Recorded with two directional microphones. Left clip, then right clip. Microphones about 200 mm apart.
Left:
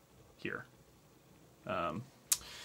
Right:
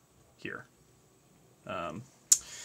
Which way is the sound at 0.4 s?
5° right (ahead or behind).